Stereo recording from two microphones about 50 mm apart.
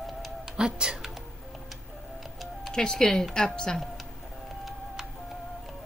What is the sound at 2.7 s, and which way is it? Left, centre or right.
Speech, centre.